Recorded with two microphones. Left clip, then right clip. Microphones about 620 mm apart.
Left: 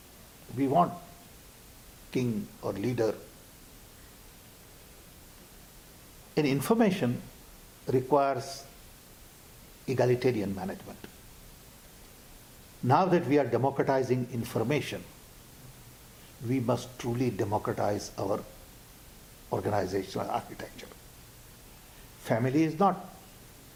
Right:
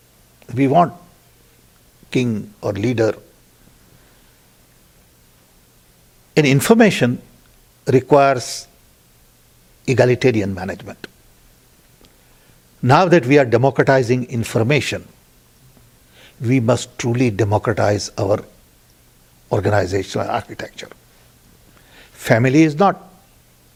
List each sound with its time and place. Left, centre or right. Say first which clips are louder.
0.5 s a man's voice: right 11 dB; right
2.0 s a man's voice: right 12 dB; right
6.3 s speech: right 14 dB; right
9.8 s a man's voice: right 12 dB; right
12.9 s a man's voice: right 12 dB; right
16.5 s a man's voice: right 13 dB; right
19.5 s a man's voice: right 12 dB; right
22.2 s speech: right 14 dB; right